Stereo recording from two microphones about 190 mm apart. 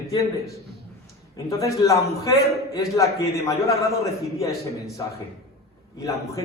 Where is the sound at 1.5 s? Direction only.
15° left (ahead or behind).